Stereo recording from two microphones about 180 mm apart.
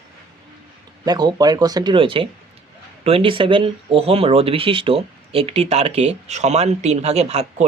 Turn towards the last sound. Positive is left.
turn(degrees=-35)  # may be behind; listen again after turning